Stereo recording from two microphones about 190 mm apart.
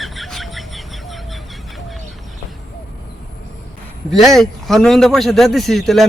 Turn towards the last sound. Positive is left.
turn(degrees=0)  # may be behind; listen again after turning